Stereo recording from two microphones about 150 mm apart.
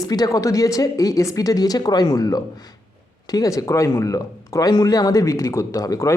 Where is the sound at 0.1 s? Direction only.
25° left (ahead or behind).